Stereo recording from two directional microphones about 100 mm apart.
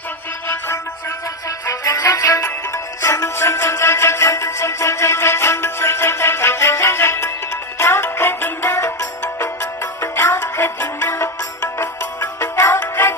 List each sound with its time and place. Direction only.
0.4 s music: 20° left (ahead or behind)
1.5 s music: 35° left (ahead or behind)